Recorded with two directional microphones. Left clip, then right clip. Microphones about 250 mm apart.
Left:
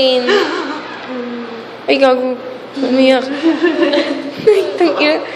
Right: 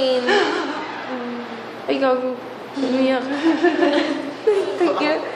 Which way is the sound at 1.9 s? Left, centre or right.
Left.